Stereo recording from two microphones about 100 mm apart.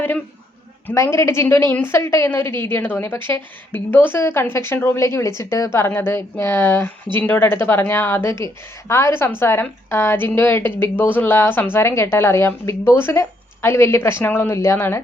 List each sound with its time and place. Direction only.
0.9 s a woman's voice: 30° left (ahead or behind)